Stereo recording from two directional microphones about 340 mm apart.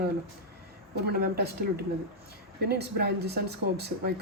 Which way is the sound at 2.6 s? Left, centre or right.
Right.